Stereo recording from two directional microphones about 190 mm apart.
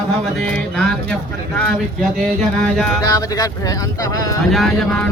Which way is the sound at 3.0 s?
20° left (ahead or behind).